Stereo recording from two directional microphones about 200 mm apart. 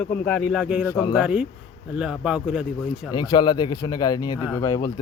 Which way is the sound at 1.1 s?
5° right (ahead or behind).